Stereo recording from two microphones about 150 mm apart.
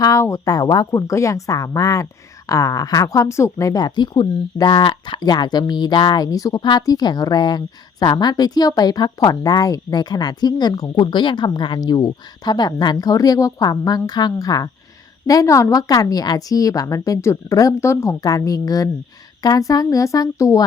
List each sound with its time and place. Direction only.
0.0 s speech: 20° left (ahead or behind)